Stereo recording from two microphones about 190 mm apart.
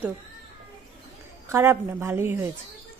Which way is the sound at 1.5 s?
15° right (ahead or behind).